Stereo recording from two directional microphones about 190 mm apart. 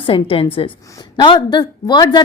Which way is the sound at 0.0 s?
30° left (ahead or behind).